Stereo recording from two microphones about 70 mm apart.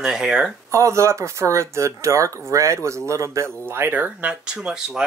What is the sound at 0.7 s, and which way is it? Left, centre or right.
Speech, right.